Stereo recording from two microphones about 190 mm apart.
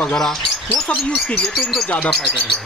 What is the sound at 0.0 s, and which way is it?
Speech, centre (ahead or behind).